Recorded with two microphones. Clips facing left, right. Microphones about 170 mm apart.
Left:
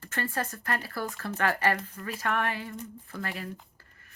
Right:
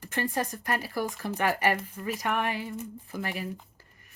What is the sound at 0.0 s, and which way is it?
Speech, 15° right (ahead or behind).